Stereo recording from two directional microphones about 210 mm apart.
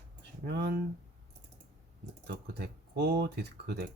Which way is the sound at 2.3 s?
50° right (ahead or behind).